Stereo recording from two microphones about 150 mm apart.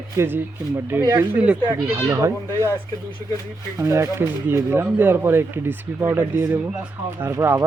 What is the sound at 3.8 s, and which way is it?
Speech, 20° right (ahead or behind).